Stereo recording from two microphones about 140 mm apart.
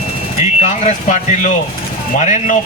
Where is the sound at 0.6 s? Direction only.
55° left (ahead or behind).